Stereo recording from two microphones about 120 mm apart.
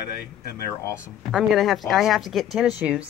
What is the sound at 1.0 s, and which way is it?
Speech, 5° right (ahead or behind).